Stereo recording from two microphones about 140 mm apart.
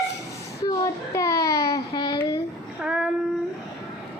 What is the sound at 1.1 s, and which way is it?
Babbling, 20° left (ahead or behind).